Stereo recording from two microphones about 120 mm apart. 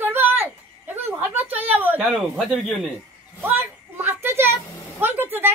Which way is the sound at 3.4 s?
15° right (ahead or behind).